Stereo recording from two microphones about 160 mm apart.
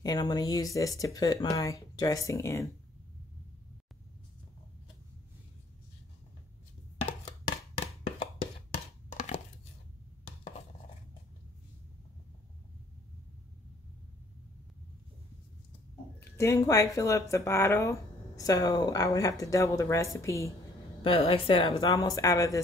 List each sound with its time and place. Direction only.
0.0 s speech: 25° left (ahead or behind)
7.1 s music: 30° left (ahead or behind)
9.1 s a sound: 45° left (ahead or behind)
16.2 s speech: 15° left (ahead or behind)
21.0 s a woman's voice: 35° left (ahead or behind)
21.7 s speech: 20° left (ahead or behind)